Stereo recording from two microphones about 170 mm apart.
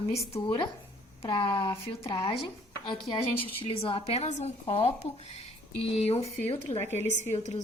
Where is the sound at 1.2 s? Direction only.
30° left (ahead or behind).